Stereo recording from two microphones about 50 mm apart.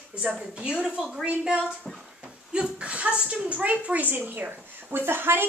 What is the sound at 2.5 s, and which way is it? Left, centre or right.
A woman's voice, right.